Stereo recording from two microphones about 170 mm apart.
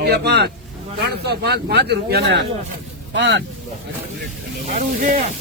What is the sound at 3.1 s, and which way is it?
Speech, 90° right.